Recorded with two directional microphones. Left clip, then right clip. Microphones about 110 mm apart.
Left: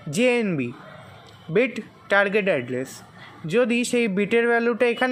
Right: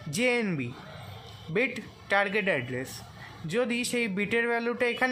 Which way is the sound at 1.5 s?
35° left (ahead or behind).